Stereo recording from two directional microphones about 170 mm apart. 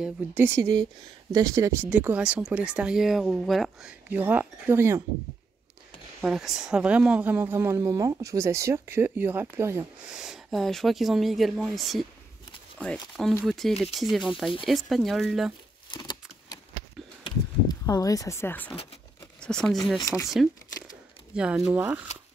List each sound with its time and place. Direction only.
0.0 s speech: 10° right (ahead or behind)
6.2 s speech: 5° right (ahead or behind)
10.1 s speech: 5° right (ahead or behind)
15.9 s a sound: 25° left (ahead or behind); by 18.8 s 10° left (ahead or behind)
19.4 s speech: 5° left (ahead or behind)
20.0 s speech: 20° left (ahead or behind)
20.2 s crumpling: centre (ahead or behind)
21.4 s speech: 5° right (ahead or behind)